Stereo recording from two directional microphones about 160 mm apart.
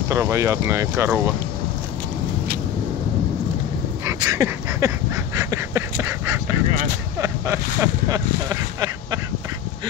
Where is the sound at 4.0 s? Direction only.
20° right (ahead or behind).